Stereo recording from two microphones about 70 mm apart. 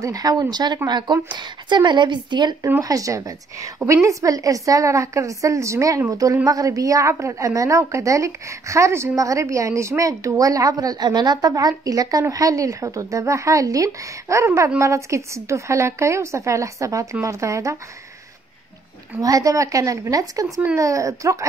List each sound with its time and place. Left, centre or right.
0.0 s a woman's voice: right
2.8 s a woman's voice: right
11.5 s a woman's voice: right
19.2 s a woman's voice: right